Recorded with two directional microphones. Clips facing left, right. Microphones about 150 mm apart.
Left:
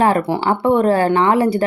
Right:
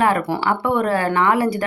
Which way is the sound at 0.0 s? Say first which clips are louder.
Left 3 dB; 25° left (ahead or behind).